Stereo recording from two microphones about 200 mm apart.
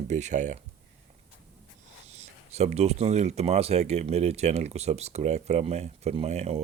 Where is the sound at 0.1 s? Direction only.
35° right (ahead or behind).